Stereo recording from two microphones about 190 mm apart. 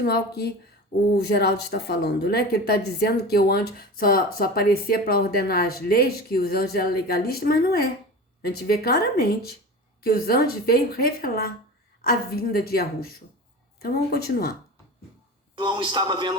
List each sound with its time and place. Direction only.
0.0 s speech: 55° left (ahead or behind)
15.5 s speech: 25° right (ahead or behind)